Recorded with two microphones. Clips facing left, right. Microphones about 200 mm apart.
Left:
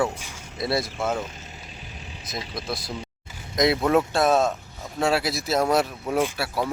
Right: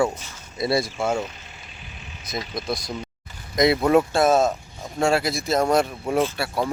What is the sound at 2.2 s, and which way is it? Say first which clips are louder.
Speech: right 4 dB; centre (ahead or behind).